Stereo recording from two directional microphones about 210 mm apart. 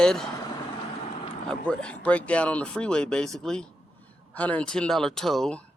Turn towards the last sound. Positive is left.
turn(degrees=5)  # may be behind; listen again after turning